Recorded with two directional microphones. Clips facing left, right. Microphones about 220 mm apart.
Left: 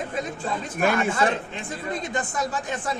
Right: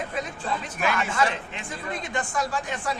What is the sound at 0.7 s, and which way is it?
Speech, 50° left (ahead or behind).